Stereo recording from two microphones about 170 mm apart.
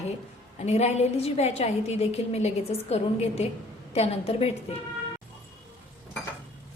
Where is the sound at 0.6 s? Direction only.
40° left (ahead or behind).